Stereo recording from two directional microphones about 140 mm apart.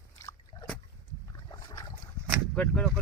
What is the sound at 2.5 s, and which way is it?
Speech, 5° left (ahead or behind).